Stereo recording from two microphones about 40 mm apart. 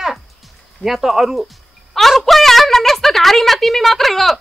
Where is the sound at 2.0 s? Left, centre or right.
Centre.